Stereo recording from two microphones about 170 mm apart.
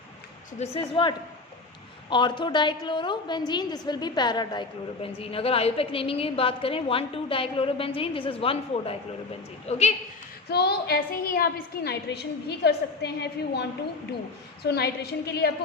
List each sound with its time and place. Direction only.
0.6 s a woman's voice: 35° left (ahead or behind)
10.5 s a woman's voice: 75° left (ahead or behind)